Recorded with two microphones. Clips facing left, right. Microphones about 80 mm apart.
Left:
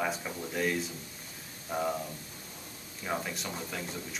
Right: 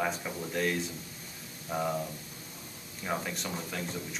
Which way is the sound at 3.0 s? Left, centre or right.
Centre.